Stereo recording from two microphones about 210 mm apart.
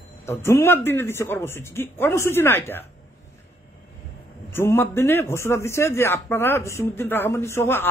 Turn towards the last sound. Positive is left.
turn(degrees=10)  # may be behind; listen again after turning